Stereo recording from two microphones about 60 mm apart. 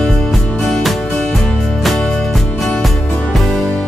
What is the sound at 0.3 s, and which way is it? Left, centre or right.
Music, centre.